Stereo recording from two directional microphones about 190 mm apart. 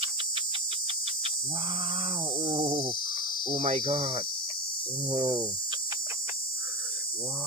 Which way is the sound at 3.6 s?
40° right (ahead or behind).